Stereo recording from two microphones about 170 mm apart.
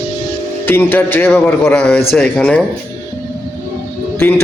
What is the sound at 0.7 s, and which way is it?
A man's voice, 10° left (ahead or behind).